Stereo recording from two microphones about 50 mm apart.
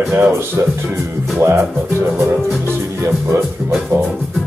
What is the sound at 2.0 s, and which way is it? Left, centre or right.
Music, right.